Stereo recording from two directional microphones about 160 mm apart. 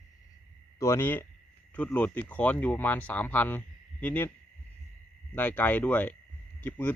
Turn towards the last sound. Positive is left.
turn(degrees=10)  # may be behind; listen again after turning